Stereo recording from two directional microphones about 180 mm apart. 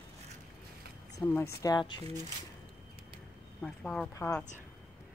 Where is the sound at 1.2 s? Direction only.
10° left (ahead or behind).